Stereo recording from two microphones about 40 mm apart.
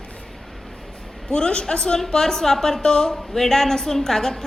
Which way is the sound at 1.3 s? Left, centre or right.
Left.